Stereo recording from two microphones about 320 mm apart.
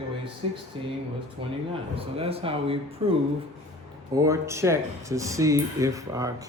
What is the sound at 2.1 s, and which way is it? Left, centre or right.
Speech, centre.